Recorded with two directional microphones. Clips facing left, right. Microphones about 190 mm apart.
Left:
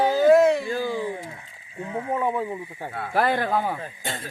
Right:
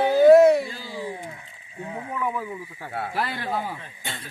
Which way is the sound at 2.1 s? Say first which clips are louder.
Left 4 dB; 30° left (ahead or behind).